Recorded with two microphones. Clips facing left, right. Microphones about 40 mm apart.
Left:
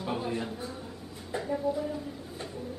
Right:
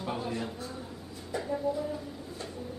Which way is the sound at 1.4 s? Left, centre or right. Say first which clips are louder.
Left 1 dB; centre.